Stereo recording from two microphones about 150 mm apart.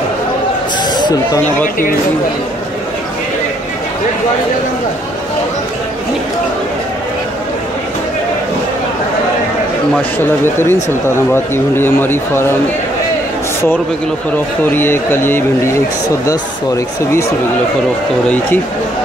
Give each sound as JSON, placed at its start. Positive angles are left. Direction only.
{"t": 0.9, "sound": "speech", "side_deg": 25}
{"t": 10.1, "sound": "speech", "side_deg": 15}
{"t": 14.7, "sound": "speech", "side_deg": 15}